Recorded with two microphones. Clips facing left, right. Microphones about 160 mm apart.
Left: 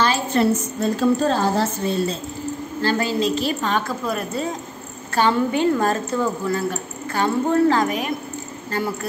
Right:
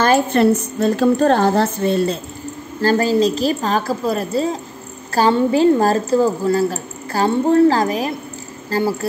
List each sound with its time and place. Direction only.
0.0 s a woman's voice: 55° right (ahead or behind)
2.8 s a woman's voice: 40° right (ahead or behind)